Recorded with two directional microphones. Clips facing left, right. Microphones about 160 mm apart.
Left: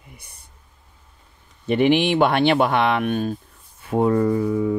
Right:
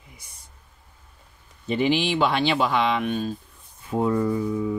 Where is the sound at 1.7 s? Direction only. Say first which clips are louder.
Left 5 dB; 60° left (ahead or behind).